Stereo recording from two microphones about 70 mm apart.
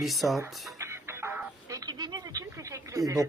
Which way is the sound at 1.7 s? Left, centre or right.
Right.